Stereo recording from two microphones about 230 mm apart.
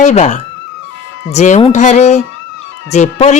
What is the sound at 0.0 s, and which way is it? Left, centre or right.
Speech, left.